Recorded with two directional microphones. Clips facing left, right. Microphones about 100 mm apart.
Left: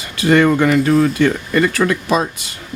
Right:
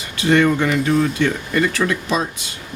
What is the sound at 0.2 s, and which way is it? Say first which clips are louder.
Speech: left 3 dB; 50° left (ahead or behind).